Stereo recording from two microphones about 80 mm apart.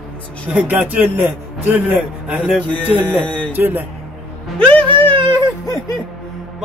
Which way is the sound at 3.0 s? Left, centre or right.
Centre.